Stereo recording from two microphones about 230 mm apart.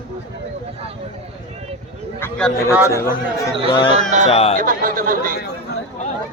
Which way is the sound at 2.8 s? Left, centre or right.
Centre.